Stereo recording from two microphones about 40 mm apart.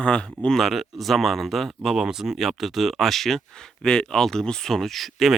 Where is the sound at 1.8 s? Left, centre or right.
Centre.